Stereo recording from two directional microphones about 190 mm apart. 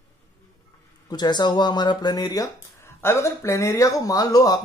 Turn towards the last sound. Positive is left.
turn(degrees=20)  # may be behind; listen again after turning